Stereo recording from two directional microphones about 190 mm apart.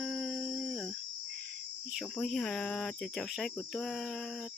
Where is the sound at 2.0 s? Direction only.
Centre (ahead or behind).